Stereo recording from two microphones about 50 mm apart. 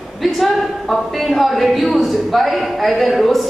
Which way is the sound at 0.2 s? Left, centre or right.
Centre.